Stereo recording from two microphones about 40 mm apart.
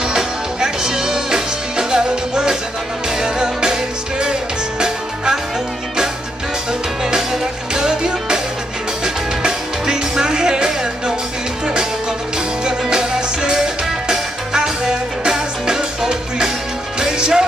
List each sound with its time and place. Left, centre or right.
0.1 s music: centre
7.7 s music: centre
12.6 s music: centre